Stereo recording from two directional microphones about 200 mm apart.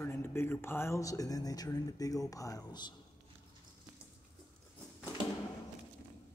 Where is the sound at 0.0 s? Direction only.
10° left (ahead or behind).